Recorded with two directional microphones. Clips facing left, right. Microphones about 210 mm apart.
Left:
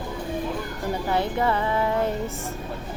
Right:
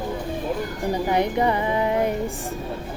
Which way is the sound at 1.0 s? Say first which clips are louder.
Right 2 dB; 15° right (ahead or behind).